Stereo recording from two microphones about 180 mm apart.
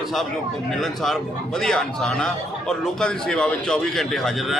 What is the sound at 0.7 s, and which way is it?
Speech, centre (ahead or behind).